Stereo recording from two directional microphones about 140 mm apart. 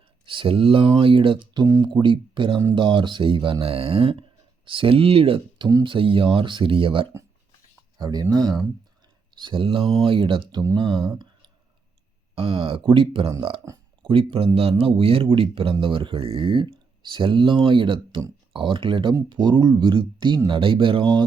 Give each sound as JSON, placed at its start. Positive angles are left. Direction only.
{"t": 0.3, "sound": "speech", "side_deg": -40}
{"t": 7.9, "sound": "speech", "side_deg": -30}
{"t": 10.5, "sound": "speech", "side_deg": -25}
{"t": 10.8, "sound": "speech", "side_deg": -35}
{"t": 11.1, "sound": "a sound", "side_deg": -30}
{"t": 12.3, "sound": "speech", "side_deg": -40}
{"t": 13.7, "sound": "speech", "side_deg": -25}
{"t": 14.0, "sound": "speech", "side_deg": -40}